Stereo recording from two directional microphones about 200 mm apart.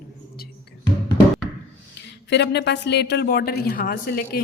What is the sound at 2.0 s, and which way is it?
A woman's voice, 60° left (ahead or behind).